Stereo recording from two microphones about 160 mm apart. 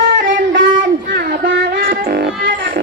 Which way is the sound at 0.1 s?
60° right (ahead or behind).